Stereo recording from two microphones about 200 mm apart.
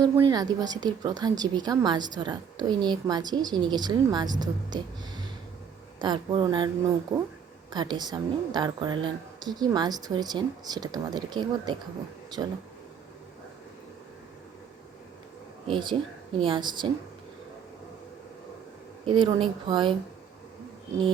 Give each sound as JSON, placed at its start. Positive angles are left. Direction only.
{"t": 0.0, "sound": "a woman's voice", "side_deg": -20}
{"t": 7.7, "sound": "a woman's voice", "side_deg": -20}
{"t": 15.6, "sound": "a woman's voice", "side_deg": -25}
{"t": 19.0, "sound": "a woman's voice", "side_deg": -25}